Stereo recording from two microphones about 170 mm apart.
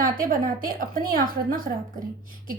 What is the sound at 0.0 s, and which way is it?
A woman's voice, 55° right (ahead or behind).